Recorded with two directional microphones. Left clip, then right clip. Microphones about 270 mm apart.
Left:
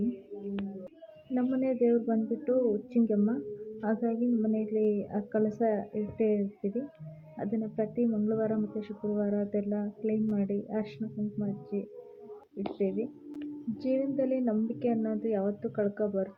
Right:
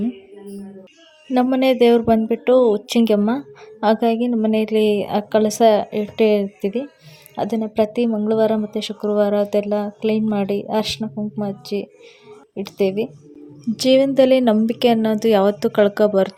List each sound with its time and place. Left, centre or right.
1.3 s a woman's voice: right
11.7 s speech: right
12.5 s a woman's voice: right